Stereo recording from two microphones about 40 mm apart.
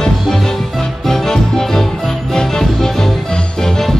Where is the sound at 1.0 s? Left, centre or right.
Centre.